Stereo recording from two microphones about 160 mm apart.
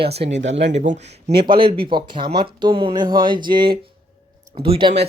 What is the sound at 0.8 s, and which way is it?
Speech, 55° right (ahead or behind).